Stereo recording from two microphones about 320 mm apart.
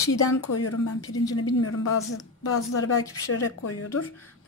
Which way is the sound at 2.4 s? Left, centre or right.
Left.